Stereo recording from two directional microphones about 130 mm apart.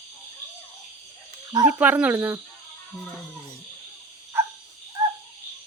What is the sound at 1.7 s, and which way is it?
Speech, 10° right (ahead or behind).